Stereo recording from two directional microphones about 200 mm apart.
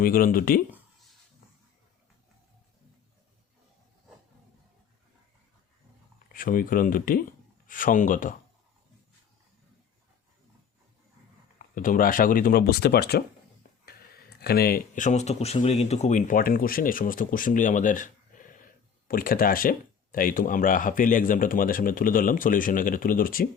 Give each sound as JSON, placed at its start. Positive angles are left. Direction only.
{"t": 0.0, "sound": "speech", "side_deg": 45}
{"t": 6.1, "sound": "speech", "side_deg": 45}
{"t": 11.6, "sound": "speech", "side_deg": 40}